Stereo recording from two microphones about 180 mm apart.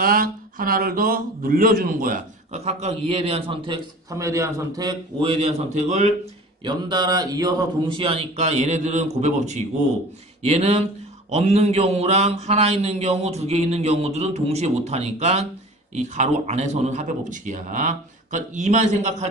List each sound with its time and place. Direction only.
0.0 s speech: 50° right (ahead or behind); by 4.9 s 20° right (ahead or behind)
5.2 s a man's voice: 40° right (ahead or behind)
6.6 s a man's voice: 25° right (ahead or behind); by 19.1 s 40° right (ahead or behind)